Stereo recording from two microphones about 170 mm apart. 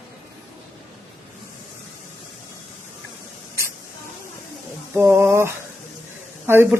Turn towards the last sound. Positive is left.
turn(degrees=-15)  # may be behind; listen again after turning